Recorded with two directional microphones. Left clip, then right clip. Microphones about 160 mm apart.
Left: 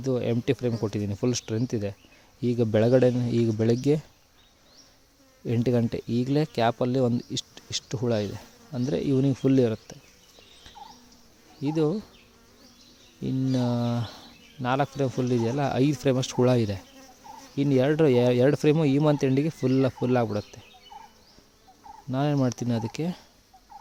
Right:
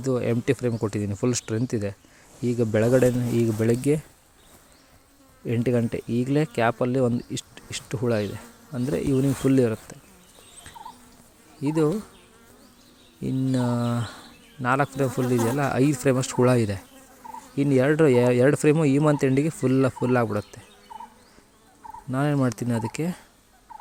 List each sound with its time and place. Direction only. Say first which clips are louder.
0.0 s speech: right 2 dB; 10° left (ahead or behind)
5.5 s speech: right 1 dB; 20° left (ahead or behind)
11.6 s speech: right 3 dB; 10° left (ahead or behind)
13.2 s speech: right 2 dB; 20° left (ahead or behind)
22.1 s speech: right 1 dB; 15° left (ahead or behind)